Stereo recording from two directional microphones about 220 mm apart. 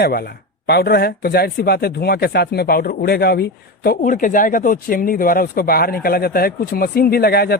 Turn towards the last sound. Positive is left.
turn(degrees=45)  # may be behind; listen again after turning